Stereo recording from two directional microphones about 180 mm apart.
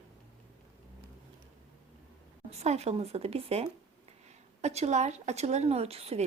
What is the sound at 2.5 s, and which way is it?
Speech, 35° right (ahead or behind).